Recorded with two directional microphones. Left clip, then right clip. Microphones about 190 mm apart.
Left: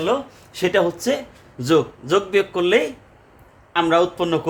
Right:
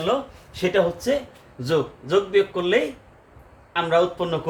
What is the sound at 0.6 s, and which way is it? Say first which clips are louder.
A man's voice: left 2 dB; 55° left (ahead or behind).